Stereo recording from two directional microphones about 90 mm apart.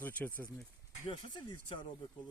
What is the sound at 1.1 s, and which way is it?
Speech, 65° left (ahead or behind).